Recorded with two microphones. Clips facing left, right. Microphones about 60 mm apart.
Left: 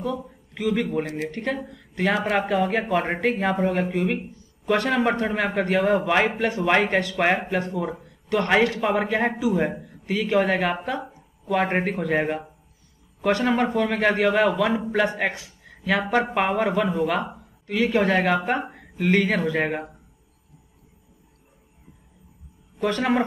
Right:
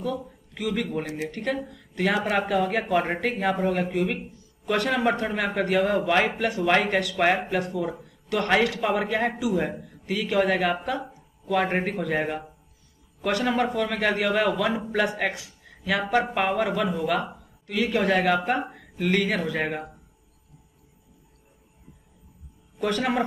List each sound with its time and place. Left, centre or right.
0.0 s a man's voice: centre
13.7 s speech: centre
22.8 s a woman's voice: left